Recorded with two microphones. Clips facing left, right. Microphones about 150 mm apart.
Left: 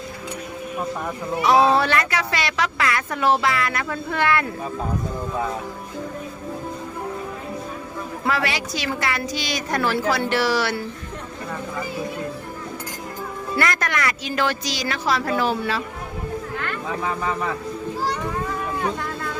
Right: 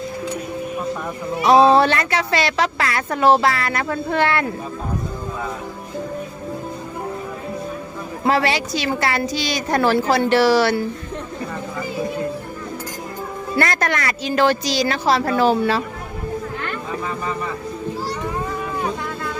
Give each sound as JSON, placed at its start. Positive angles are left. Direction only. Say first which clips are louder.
{"t": 1.5, "sound": "a woman's voice", "louder": "right 4 dB", "side_deg": -25}
{"t": 8.3, "sound": "a woman's voice", "louder": "right 6 dB", "side_deg": -30}
{"t": 13.6, "sound": "a woman's voice", "louder": "right 3 dB", "side_deg": -35}